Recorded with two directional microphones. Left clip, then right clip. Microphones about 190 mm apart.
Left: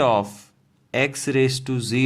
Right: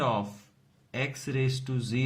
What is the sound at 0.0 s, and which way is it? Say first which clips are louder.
Speech: left 10 dB; 50° left (ahead or behind).